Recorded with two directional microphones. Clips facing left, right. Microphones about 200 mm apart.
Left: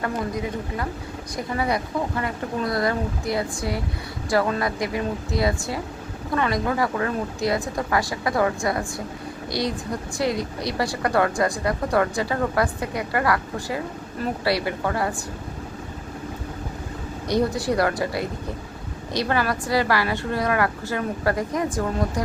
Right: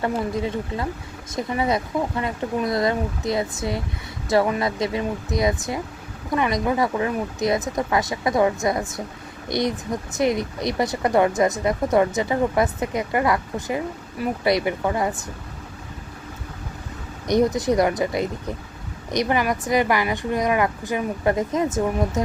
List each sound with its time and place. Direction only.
0.0 s a woman's voice: 25° right (ahead or behind)
17.2 s a woman's voice: 20° right (ahead or behind)